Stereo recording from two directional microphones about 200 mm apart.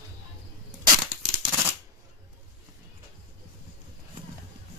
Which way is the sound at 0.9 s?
15° right (ahead or behind).